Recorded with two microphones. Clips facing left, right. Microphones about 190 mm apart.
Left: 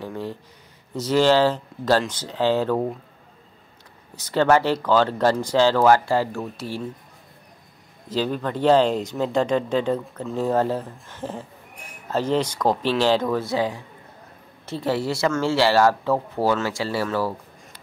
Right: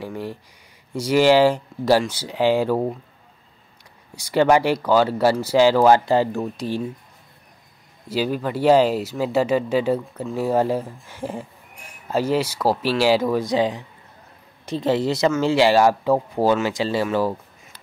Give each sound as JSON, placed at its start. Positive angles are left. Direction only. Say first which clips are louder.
{"t": 0.0, "sound": "speech", "louder": "right 1 dB", "side_deg": -10}
{"t": 4.1, "sound": "speech", "louder": "right 2 dB", "side_deg": -10}
{"t": 8.1, "sound": "a woman's voice", "louder": "right 1 dB", "side_deg": -10}